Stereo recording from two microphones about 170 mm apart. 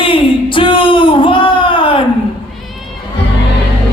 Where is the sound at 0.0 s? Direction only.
30° left (ahead or behind).